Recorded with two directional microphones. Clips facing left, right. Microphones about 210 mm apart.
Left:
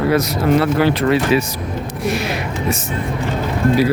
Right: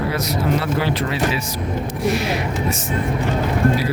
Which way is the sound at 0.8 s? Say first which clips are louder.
Left 6 dB; 60° left (ahead or behind).